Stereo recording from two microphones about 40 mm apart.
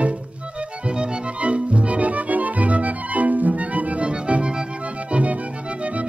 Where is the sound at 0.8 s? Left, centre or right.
Right.